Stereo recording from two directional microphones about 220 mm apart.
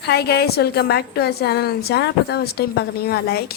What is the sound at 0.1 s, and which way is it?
A woman's voice, 45° left (ahead or behind).